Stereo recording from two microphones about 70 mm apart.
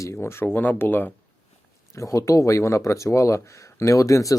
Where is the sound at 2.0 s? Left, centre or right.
Left.